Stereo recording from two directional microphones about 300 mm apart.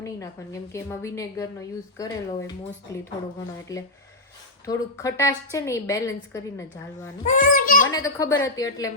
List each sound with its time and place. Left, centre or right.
0.7 s a woman's voice: centre
7.3 s a child's voice: left
7.9 s a woman's voice: centre